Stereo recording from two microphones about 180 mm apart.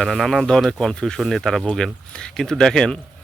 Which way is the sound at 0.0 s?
Centre (ahead or behind).